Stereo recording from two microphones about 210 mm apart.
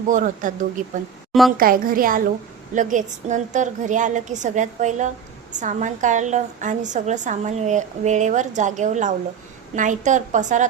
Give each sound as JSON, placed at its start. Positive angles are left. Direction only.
{"t": 0.1, "sound": "a woman's voice", "side_deg": -40}
{"t": 1.3, "sound": "a woman's voice", "side_deg": 0}
{"t": 1.5, "sound": "a woman's voice", "side_deg": -40}